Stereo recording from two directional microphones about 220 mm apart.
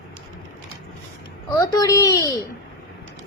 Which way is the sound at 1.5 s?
15° left (ahead or behind).